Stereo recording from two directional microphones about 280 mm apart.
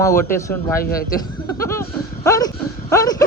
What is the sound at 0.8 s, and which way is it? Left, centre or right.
Speech, left.